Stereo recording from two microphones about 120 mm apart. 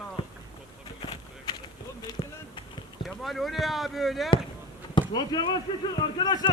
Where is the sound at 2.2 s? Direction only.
55° left (ahead or behind).